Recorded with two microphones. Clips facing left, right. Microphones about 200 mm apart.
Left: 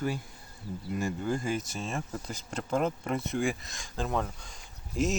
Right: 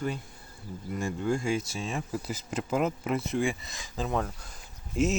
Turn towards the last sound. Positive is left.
turn(degrees=0)  # may be behind; listen again after turning